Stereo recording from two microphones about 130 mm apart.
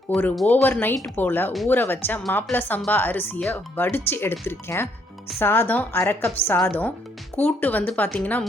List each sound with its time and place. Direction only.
0.1 s speech: centre (ahead or behind)
0.4 s speech: 15° left (ahead or behind)